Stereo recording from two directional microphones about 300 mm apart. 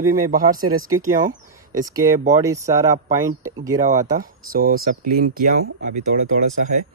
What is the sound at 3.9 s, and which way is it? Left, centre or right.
Speech, right.